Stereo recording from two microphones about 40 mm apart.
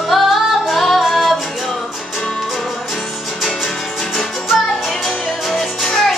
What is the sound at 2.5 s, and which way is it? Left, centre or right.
Music, centre.